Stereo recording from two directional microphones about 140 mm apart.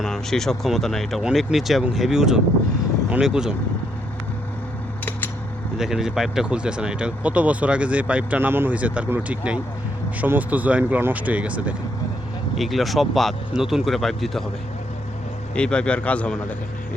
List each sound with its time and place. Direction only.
0.0 s speech: 5° left (ahead or behind)
5.7 s speech: 5° right (ahead or behind)
15.5 s a man's voice: 5° left (ahead or behind)